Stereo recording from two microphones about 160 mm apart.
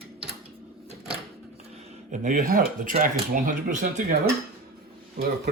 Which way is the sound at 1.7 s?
50° right (ahead or behind).